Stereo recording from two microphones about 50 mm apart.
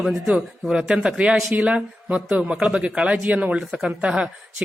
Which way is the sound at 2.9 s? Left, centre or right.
Right.